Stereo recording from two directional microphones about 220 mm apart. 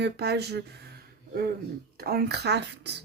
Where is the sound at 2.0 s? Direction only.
45° right (ahead or behind).